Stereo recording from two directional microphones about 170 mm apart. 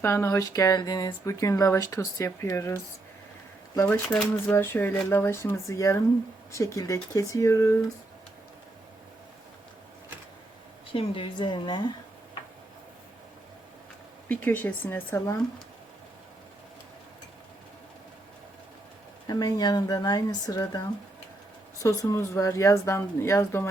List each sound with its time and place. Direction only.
0.0 s speech: 15° left (ahead or behind)
10.9 s speech: 30° left (ahead or behind)
14.3 s speech: 10° left (ahead or behind)
19.3 s speech: 25° left (ahead or behind)